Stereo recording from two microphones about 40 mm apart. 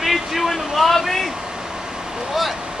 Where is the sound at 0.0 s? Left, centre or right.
Centre.